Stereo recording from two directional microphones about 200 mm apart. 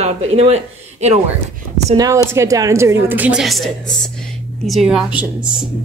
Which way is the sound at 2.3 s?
15° right (ahead or behind).